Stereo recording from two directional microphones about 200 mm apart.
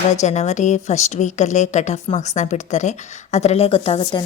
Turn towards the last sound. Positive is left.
turn(degrees=30)  # may be behind; listen again after turning